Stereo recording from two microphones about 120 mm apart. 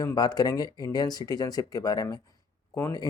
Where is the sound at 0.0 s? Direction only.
30° left (ahead or behind).